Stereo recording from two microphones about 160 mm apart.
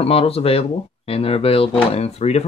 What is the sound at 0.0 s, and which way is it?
Speech, 40° left (ahead or behind).